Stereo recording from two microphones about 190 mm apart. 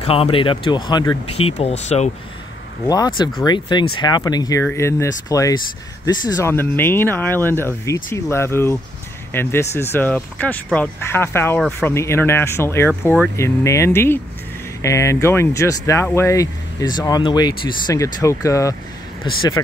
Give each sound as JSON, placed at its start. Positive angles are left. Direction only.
{"t": 0.0, "sound": "speech", "side_deg": 30}
{"t": 2.9, "sound": "speech", "side_deg": 20}